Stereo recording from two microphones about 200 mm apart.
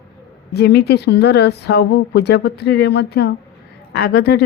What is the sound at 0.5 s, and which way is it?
Speech, 55° left (ahead or behind).